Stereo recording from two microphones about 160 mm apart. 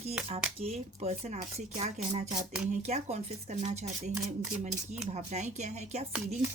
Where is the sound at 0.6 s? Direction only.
40° right (ahead or behind).